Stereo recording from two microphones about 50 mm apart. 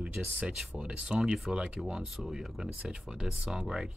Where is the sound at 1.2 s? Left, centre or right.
Centre.